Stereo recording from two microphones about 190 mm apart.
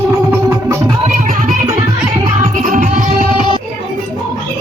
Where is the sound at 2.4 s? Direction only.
40° right (ahead or behind).